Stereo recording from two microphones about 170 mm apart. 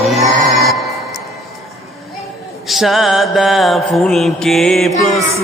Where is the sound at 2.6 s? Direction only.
Centre (ahead or behind).